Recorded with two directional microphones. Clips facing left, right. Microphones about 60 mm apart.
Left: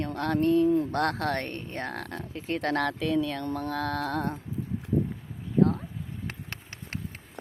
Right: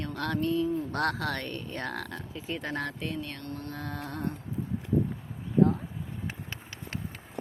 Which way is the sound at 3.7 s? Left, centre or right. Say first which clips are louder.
Left 9 dB; left.